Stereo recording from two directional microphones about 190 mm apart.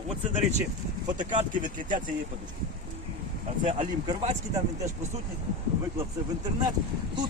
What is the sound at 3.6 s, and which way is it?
Speech, 30° right (ahead or behind).